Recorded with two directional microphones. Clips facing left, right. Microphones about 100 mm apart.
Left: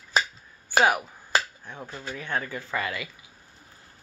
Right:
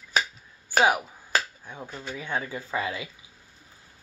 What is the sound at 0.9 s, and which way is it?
Speech, 15° right (ahead or behind).